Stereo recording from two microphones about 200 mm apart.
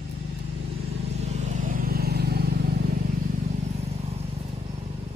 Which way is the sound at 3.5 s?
35° right (ahead or behind).